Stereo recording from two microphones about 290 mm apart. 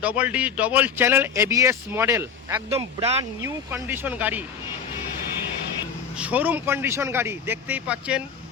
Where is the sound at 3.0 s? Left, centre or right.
Right.